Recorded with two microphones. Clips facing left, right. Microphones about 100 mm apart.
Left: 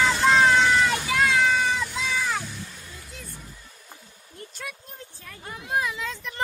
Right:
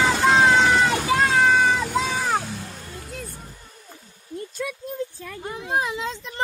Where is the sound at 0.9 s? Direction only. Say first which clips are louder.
Right 3 dB; 40° right (ahead or behind).